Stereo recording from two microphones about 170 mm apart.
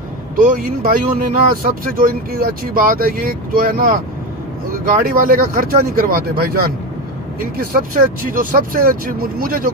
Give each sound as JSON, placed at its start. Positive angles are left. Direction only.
{"t": 0.4, "sound": "speech", "side_deg": -55}